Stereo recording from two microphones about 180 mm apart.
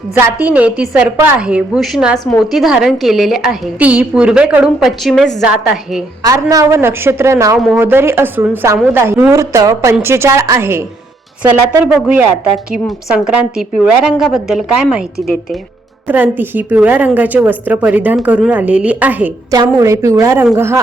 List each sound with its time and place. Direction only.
0.1 s a woman's voice: 10° right (ahead or behind)
6.2 s a woman's voice: 20° right (ahead or behind)